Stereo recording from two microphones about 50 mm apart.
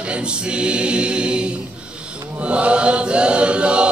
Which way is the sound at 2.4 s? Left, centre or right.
Right.